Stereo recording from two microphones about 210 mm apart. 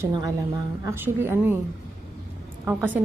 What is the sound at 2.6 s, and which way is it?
Speech, 10° right (ahead or behind).